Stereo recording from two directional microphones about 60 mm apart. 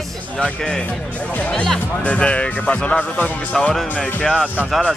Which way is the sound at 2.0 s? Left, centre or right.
Left.